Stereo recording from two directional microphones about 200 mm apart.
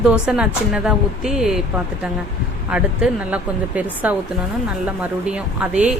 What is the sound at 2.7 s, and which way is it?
Speech, 5° right (ahead or behind).